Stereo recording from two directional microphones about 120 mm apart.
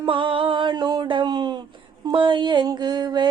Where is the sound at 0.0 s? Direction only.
45° right (ahead or behind).